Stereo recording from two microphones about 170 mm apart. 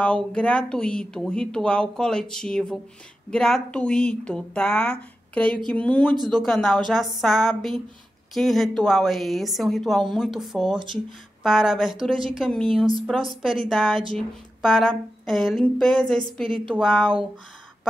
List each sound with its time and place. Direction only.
0.0 s speech: 5° left (ahead or behind)